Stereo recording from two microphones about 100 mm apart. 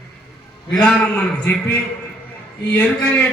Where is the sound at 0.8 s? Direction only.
15° left (ahead or behind).